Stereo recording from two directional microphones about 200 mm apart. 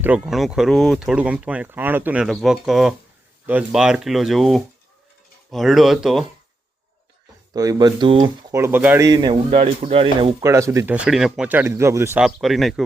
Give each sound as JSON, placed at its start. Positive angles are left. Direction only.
{"t": 0.0, "sound": "speech", "side_deg": -5}
{"t": 7.5, "sound": "speech", "side_deg": -20}
{"t": 9.0, "sound": "speech", "side_deg": -20}
{"t": 10.4, "sound": "speech", "side_deg": -15}